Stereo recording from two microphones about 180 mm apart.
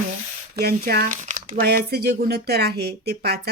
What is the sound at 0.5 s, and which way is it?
Speech, 60° right (ahead or behind).